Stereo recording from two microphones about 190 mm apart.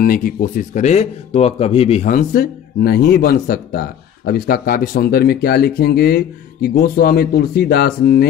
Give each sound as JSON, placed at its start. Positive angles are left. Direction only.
{"t": 0.0, "sound": "speech", "side_deg": 45}
{"t": 2.0, "sound": "speech", "side_deg": 50}